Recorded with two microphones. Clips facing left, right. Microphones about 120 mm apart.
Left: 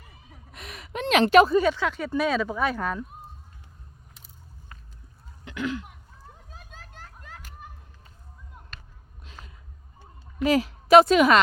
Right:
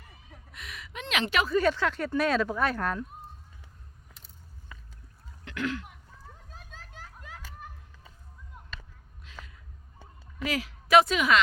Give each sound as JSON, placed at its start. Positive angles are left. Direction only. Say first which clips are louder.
{"t": 0.1, "sound": "a sound", "louder": "left 1 dB", "side_deg": 5}
{"t": 0.5, "sound": "gasp", "louder": "left 7 dB", "side_deg": 40}
{"t": 1.6, "sound": "speech", "louder": "left 1 dB", "side_deg": 0}
{"t": 5.5, "sound": "throat clearing", "louder": "left 2 dB", "side_deg": 5}
{"t": 6.5, "sound": "children playing", "louder": "left 1 dB", "side_deg": 5}
{"t": 10.3, "sound": "a woman's voice", "louder": "left 9 dB", "side_deg": 30}